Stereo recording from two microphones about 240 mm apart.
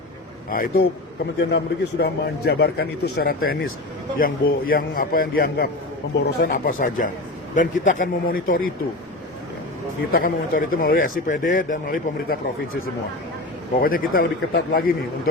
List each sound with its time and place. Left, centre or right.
0.5 s a man's voice: left
10.1 s a man's voice: left
13.8 s a man's voice: left